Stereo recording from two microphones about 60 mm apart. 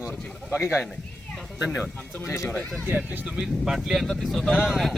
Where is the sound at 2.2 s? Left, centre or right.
Left.